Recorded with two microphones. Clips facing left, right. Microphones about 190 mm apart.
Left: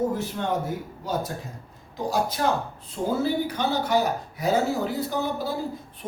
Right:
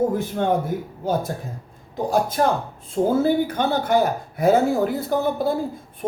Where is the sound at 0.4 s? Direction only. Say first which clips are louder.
Right 8 dB; 55° right (ahead or behind).